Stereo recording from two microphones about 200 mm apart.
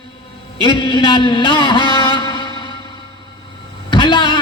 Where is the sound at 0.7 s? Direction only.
20° left (ahead or behind).